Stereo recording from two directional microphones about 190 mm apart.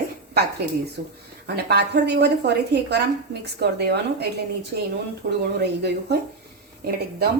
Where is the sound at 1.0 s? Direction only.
60° right (ahead or behind).